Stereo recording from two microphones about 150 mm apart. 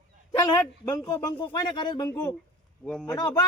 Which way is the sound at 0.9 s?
25° left (ahead or behind).